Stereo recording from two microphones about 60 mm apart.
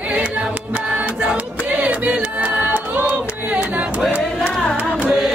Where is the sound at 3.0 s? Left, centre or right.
Right.